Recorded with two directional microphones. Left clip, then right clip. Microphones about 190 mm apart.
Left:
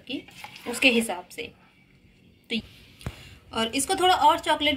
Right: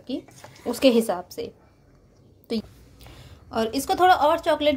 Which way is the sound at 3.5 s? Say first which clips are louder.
Right 2 dB; 50° right (ahead or behind).